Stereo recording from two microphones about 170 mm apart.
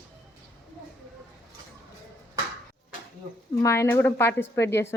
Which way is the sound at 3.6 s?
15° left (ahead or behind).